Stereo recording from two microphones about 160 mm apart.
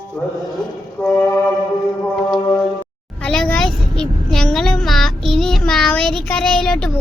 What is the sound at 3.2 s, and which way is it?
Child singing, 5° left (ahead or behind).